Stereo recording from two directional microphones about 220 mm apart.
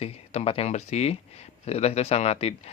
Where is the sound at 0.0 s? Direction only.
25° left (ahead or behind).